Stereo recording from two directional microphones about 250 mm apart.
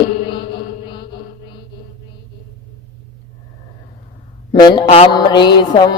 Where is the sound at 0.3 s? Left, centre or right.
Centre.